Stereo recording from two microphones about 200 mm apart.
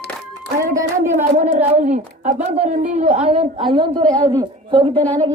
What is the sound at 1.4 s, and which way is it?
A woman's voice, 35° right (ahead or behind).